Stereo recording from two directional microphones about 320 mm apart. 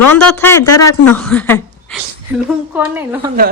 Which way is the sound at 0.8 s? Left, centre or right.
Left.